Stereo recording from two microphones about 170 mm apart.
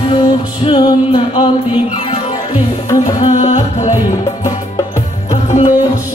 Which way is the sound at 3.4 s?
45° left (ahead or behind).